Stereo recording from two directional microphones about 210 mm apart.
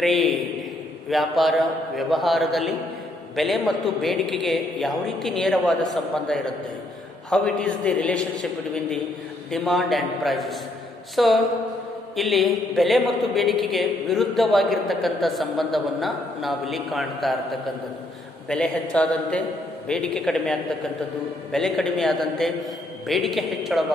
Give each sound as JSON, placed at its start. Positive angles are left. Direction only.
{"t": 0.0, "sound": "a man's voice", "side_deg": 0}